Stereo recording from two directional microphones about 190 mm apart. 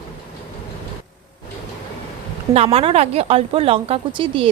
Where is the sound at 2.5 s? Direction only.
30° right (ahead or behind).